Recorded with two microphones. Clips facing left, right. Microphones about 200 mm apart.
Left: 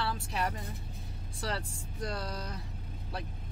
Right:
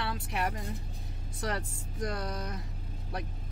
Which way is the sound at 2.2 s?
20° right (ahead or behind).